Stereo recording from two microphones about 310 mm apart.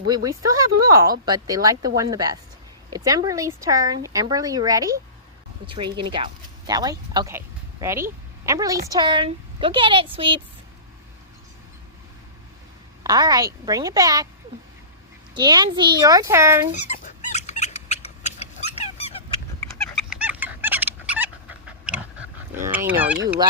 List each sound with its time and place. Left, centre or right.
0.1 s speech: centre
13.0 s speech: centre
15.4 s speech: centre
16.7 s dog: left
20.1 s dog: centre
22.6 s speech: centre